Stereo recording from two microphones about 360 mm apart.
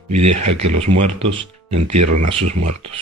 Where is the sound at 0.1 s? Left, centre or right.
Right.